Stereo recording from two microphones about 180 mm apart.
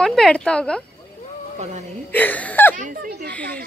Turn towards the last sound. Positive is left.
turn(degrees=10)  # may be behind; listen again after turning